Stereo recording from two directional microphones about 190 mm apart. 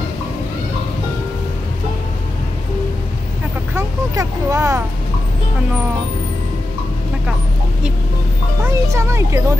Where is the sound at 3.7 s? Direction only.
15° right (ahead or behind).